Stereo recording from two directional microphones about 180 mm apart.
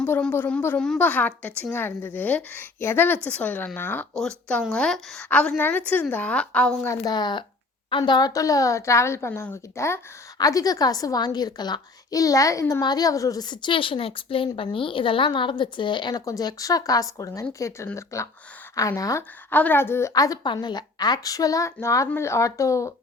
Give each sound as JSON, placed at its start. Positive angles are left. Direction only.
{"t": 0.0, "sound": "a woman's voice", "side_deg": 10}
{"t": 6.9, "sound": "a woman's voice", "side_deg": 20}